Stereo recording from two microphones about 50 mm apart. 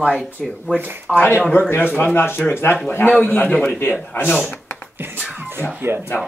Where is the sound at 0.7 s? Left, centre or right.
Left.